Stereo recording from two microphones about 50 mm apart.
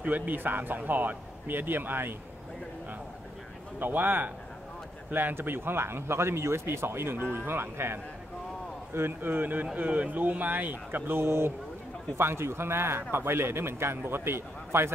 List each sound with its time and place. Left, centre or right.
0.0 s speech: right
3.8 s speech: right
9.3 s speech: right